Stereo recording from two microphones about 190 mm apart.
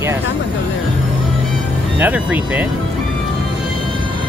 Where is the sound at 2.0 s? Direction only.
10° right (ahead or behind).